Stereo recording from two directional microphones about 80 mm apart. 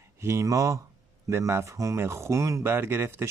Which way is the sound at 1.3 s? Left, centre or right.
Right.